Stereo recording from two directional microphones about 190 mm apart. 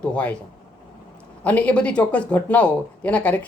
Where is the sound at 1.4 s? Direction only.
5° left (ahead or behind).